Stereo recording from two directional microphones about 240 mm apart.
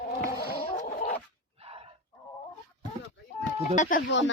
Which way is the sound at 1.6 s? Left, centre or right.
Right.